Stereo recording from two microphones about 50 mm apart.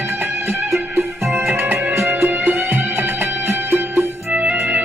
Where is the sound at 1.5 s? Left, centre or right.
Right.